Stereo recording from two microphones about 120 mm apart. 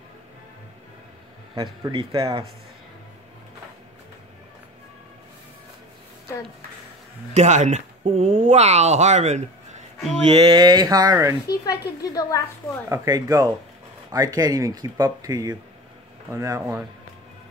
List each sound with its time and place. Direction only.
1.5 s speech: 40° right (ahead or behind)
7.3 s speech: 80° right
8.0 s speech: 55° right (ahead or behind); by 9.8 s 70° right (ahead or behind)
10.3 s speech: 35° right (ahead or behind)
11.5 s speech: 30° left (ahead or behind)
12.9 s speech: 30° right (ahead or behind)